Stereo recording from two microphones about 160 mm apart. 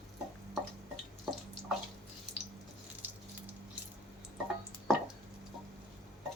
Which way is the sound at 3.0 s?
15° right (ahead or behind).